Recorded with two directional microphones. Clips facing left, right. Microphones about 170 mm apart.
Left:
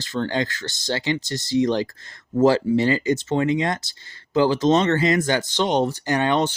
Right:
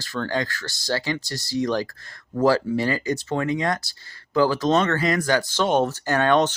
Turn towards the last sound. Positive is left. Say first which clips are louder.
# right 1 dB
turn(degrees=15)  # may be behind; listen again after turning